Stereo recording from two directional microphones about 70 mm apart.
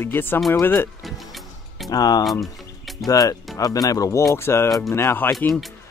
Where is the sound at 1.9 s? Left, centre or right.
Left.